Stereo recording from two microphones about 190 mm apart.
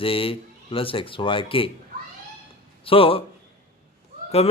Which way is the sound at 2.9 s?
30° left (ahead or behind).